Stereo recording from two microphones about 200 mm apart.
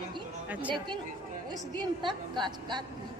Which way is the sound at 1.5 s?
20° right (ahead or behind).